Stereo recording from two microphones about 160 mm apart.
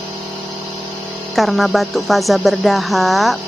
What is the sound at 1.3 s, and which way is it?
Speech, centre (ahead or behind).